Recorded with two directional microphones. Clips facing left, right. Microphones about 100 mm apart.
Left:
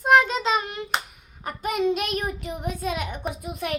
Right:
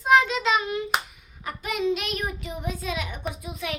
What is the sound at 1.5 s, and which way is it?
Child singing, 40° left (ahead or behind).